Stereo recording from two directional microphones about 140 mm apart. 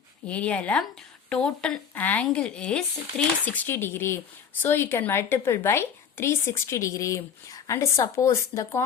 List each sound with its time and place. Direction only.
0.3 s a woman's voice: 10° left (ahead or behind)